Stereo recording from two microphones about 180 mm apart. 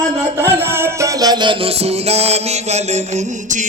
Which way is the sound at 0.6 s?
15° right (ahead or behind).